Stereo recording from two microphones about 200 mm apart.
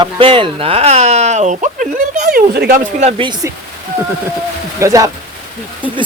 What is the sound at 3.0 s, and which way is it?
Speech, 25° right (ahead or behind).